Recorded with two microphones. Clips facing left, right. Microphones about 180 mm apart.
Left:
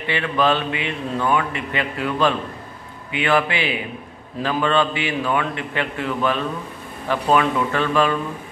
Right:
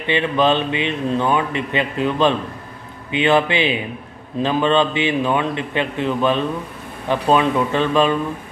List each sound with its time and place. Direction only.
0.0 s a man's voice: 20° right (ahead or behind)